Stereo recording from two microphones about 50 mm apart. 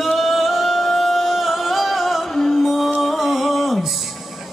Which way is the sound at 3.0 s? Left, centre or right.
Centre.